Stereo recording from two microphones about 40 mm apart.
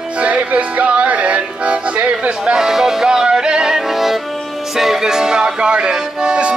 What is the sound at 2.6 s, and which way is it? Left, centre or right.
Music, centre.